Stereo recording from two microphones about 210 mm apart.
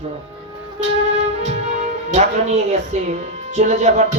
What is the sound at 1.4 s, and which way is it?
Speech, 35° right (ahead or behind).